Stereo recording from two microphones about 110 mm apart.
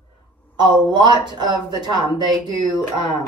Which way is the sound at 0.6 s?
40° right (ahead or behind).